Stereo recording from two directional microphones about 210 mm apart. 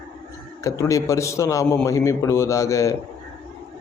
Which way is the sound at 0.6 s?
15° left (ahead or behind).